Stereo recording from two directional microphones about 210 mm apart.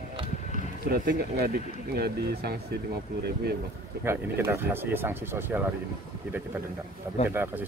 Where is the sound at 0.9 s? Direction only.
45° right (ahead or behind).